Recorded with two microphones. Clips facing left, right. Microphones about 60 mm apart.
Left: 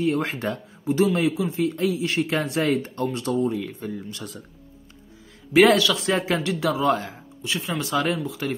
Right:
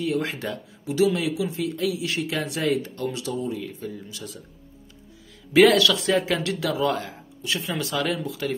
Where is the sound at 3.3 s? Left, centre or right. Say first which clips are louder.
Left 5 dB; left.